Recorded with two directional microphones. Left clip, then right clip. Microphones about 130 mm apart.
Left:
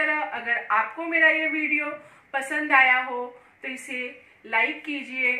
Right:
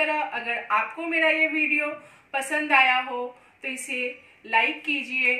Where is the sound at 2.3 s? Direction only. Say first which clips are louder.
Even; 20° right (ahead or behind).